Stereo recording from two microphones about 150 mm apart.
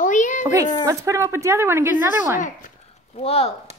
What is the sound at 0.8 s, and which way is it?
Speech, 20° right (ahead or behind).